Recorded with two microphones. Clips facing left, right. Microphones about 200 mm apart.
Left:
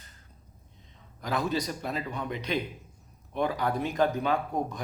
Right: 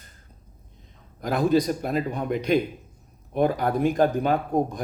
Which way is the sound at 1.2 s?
50° right (ahead or behind).